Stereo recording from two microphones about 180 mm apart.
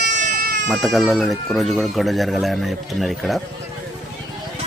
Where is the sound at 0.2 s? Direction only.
45° right (ahead or behind).